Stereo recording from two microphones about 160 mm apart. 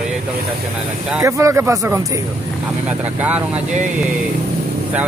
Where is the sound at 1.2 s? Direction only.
20° right (ahead or behind).